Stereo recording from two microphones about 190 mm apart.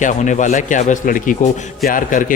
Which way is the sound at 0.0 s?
40° left (ahead or behind).